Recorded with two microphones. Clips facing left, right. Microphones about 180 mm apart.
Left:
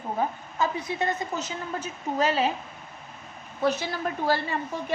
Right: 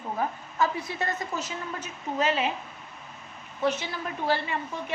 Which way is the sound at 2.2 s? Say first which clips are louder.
Left 2 dB; 35° left (ahead or behind).